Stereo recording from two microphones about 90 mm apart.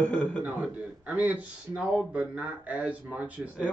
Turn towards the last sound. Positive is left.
turn(degrees=-15)  # may be behind; listen again after turning